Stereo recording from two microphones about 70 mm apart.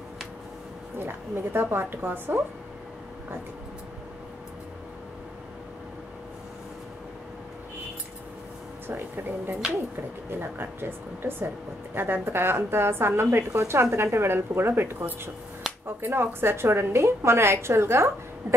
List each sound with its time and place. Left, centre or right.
0.9 s speech: right
8.8 s speech: right
15.7 s a sound: centre
16.0 s speech: right